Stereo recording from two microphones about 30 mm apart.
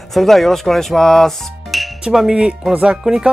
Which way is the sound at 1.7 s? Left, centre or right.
Centre.